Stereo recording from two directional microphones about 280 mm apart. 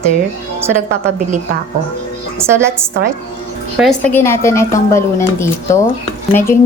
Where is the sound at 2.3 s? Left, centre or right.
Centre.